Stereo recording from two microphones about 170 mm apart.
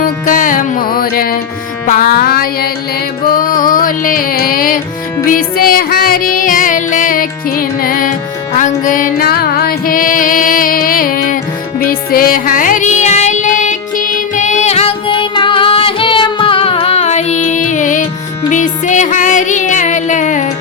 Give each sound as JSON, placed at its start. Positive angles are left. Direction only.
{"t": 0.0, "sound": "music", "side_deg": 50}